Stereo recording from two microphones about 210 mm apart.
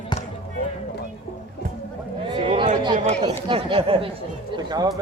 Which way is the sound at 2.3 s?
25° right (ahead or behind).